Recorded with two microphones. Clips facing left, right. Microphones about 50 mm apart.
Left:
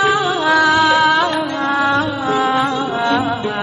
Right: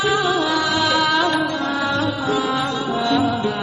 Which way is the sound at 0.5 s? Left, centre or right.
Left.